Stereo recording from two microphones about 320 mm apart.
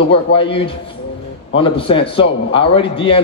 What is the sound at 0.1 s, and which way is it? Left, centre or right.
A man's voice, centre.